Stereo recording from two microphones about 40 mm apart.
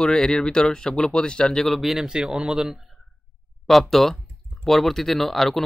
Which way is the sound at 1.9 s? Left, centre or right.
Centre.